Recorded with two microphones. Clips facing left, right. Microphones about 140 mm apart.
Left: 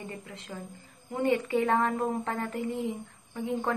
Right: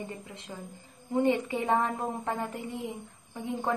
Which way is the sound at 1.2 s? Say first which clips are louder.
Left 2 dB; 20° right (ahead or behind).